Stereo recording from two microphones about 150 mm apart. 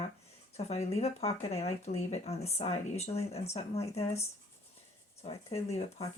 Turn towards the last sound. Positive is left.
turn(degrees=45)  # may be behind; listen again after turning